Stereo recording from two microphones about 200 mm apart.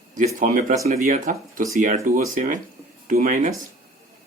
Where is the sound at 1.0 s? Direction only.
40° right (ahead or behind).